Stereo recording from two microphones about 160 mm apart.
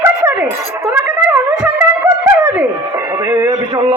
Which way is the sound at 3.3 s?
15° right (ahead or behind).